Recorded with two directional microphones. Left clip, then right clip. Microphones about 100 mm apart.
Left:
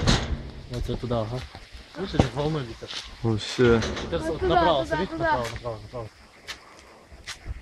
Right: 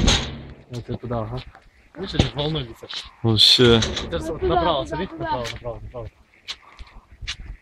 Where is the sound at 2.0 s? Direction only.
15° left (ahead or behind).